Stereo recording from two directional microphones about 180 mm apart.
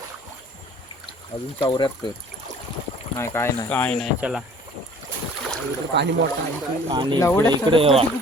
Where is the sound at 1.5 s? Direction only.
25° left (ahead or behind).